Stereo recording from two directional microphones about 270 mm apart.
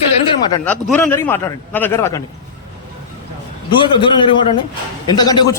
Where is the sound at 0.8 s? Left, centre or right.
Centre.